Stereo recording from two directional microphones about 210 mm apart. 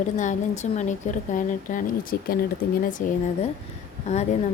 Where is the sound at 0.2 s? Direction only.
35° left (ahead or behind).